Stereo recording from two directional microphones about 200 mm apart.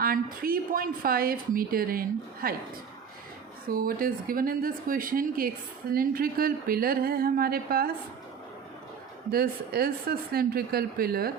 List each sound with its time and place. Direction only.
0.0 s a woman's voice: 45° right (ahead or behind)
3.7 s a woman's voice: 45° right (ahead or behind)
9.3 s a woman's voice: 50° right (ahead or behind)